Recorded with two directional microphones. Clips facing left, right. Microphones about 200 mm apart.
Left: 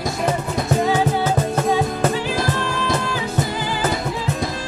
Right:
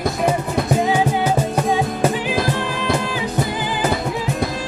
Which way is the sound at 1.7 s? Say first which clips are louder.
Right 1 dB; 15° right (ahead or behind).